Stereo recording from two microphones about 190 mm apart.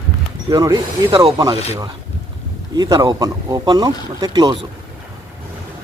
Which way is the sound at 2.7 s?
20° right (ahead or behind).